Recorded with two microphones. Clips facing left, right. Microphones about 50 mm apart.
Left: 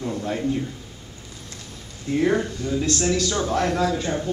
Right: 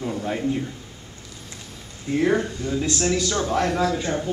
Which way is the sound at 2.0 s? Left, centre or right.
Centre.